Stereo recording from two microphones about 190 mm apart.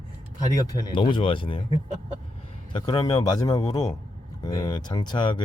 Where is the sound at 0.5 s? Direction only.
20° left (ahead or behind).